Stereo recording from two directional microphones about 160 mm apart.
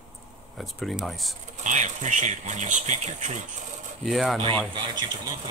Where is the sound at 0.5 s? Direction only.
Centre (ahead or behind).